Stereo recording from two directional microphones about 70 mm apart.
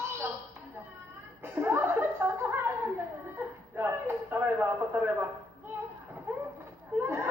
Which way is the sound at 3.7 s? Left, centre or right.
Right.